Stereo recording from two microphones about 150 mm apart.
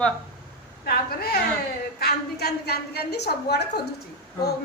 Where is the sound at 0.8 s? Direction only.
90° left.